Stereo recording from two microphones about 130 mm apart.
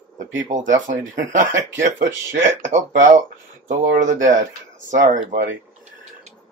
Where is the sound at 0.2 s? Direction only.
75° right (ahead or behind).